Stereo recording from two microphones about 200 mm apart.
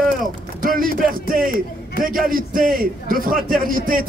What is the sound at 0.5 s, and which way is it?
Speech, 45° right (ahead or behind).